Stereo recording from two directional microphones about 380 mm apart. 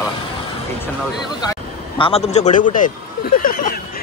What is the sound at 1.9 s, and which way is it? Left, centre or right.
A man's voice, centre.